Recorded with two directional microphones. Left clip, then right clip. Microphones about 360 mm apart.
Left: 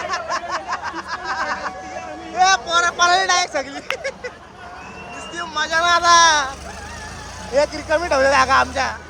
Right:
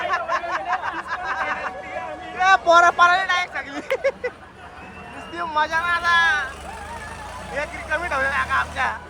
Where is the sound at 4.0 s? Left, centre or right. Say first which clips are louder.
Right 4 dB; centre.